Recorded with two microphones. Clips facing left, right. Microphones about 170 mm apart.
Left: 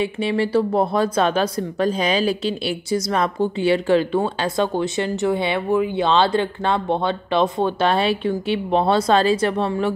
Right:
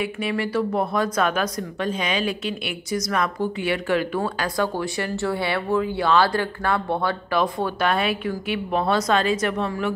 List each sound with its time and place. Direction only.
0.0 s speech: 30° left (ahead or behind)